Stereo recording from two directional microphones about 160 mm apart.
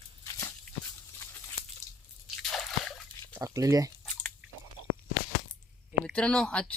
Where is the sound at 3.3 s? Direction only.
20° right (ahead or behind).